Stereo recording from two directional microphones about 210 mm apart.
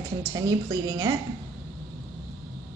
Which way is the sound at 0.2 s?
15° right (ahead or behind).